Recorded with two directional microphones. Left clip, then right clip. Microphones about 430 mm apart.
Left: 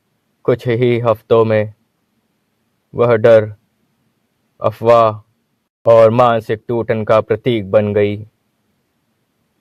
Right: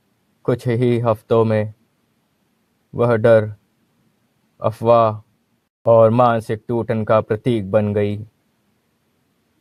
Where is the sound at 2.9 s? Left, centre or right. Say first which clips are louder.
Left 4 dB; centre.